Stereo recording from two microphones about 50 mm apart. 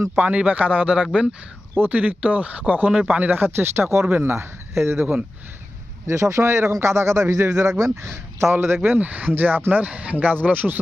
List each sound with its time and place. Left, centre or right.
0.3 s speech: right
6.1 s speech: right
8.6 s speech: right
9.0 s speech: right
9.8 s speech: right